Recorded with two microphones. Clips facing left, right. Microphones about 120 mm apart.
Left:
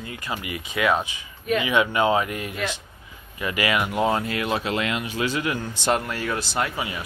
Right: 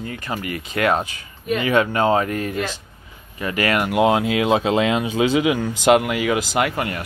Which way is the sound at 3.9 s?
80° right.